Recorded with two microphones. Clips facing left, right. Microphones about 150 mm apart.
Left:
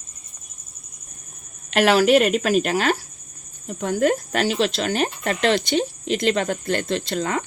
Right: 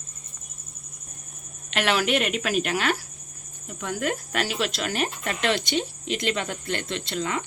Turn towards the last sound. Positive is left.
turn(degrees=40)  # may be behind; listen again after turning